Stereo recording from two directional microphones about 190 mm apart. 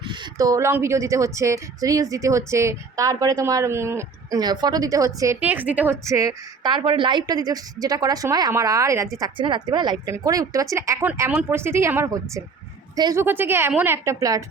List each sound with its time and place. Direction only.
0.1 s a woman's voice: 20° right (ahead or behind)